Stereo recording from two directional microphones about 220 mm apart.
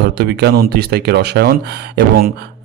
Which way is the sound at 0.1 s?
45° right (ahead or behind).